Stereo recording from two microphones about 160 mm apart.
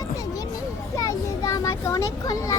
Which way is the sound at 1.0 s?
20° left (ahead or behind).